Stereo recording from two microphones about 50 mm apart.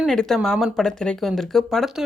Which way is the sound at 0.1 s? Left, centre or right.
Centre.